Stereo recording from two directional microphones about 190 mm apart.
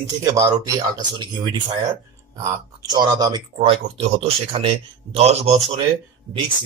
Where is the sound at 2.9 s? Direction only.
20° right (ahead or behind).